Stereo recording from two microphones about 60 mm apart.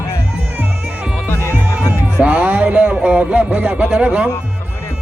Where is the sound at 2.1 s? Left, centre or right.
Right.